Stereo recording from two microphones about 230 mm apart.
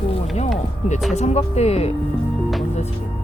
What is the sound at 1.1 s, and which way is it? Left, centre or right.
Speech, left.